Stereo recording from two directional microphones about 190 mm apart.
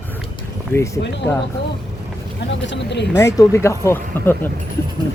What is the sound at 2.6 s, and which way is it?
Speech, 70° left (ahead or behind).